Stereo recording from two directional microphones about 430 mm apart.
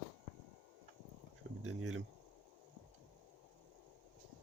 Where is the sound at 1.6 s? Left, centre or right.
Right.